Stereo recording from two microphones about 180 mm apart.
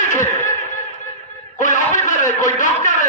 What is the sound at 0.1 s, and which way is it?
Snicker, 45° left (ahead or behind).